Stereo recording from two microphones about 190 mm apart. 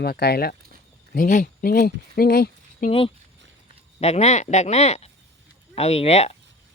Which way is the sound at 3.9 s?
35° left (ahead or behind).